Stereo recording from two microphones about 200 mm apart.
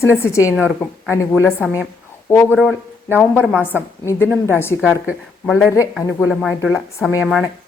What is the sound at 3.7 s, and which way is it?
Speech, 10° left (ahead or behind).